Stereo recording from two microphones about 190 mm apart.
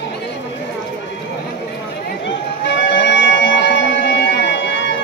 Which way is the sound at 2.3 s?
70° left (ahead or behind).